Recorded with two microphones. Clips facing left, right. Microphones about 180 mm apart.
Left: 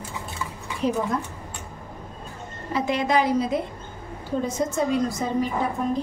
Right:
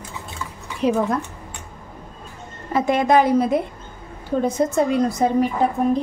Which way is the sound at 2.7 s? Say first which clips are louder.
Right 6 dB; 50° right (ahead or behind).